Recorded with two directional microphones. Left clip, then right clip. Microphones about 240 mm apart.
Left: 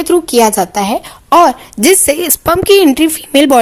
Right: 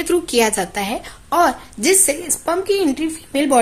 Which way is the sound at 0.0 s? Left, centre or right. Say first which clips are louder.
Left 7 dB; centre.